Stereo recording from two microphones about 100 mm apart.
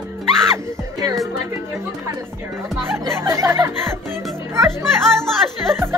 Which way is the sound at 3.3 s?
30° right (ahead or behind).